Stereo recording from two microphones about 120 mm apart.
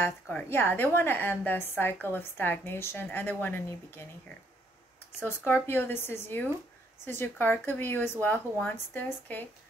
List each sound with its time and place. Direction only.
0.0 s speech: 15° left (ahead or behind)
5.2 s speech: 15° left (ahead or behind)